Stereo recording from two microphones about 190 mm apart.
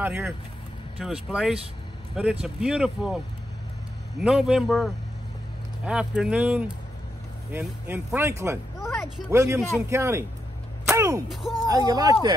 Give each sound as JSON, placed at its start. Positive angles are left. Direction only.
{"t": 0.0, "sound": "speech", "side_deg": -10}
{"t": 4.2, "sound": "speech", "side_deg": -5}
{"t": 8.7, "sound": "a sound", "side_deg": 15}
{"t": 9.3, "sound": "speech", "side_deg": -15}